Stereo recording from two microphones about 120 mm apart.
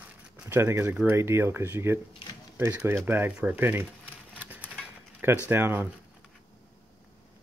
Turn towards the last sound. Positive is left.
turn(degrees=-20)  # may be behind; listen again after turning